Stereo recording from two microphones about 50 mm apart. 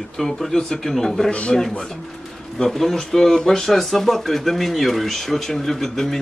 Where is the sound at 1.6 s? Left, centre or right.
Centre.